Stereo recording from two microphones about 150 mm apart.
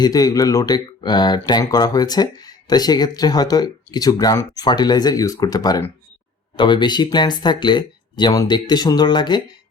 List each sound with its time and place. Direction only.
0.0 s speech: 25° left (ahead or behind)